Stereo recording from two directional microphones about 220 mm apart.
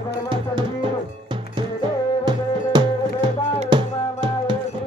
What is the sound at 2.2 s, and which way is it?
Music, 20° right (ahead or behind).